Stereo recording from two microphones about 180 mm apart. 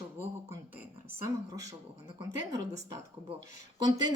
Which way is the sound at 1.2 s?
20° right (ahead or behind).